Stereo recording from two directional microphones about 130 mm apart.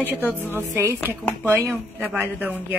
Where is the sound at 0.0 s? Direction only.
15° right (ahead or behind).